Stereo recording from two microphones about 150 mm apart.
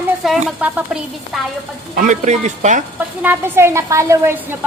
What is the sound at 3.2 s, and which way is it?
Speech, 15° right (ahead or behind).